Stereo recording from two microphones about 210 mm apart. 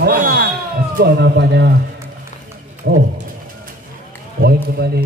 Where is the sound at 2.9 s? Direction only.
55° right (ahead or behind).